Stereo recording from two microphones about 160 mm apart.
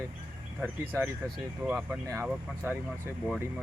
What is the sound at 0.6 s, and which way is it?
Speech, 15° right (ahead or behind).